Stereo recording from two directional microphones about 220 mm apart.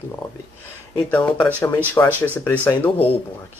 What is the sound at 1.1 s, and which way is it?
Speech, 10° left (ahead or behind).